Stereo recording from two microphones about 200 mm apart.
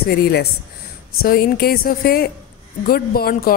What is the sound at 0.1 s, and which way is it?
A woman's voice, 55° left (ahead or behind).